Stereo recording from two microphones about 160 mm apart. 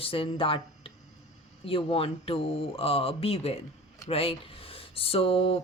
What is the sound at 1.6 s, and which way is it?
A woman's voice, 35° left (ahead or behind).